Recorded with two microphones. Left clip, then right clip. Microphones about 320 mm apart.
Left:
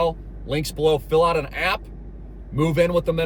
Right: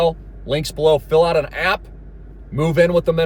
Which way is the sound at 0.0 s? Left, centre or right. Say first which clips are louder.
Right 5 dB; centre.